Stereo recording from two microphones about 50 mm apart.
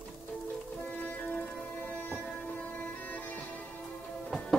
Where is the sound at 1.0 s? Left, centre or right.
Left.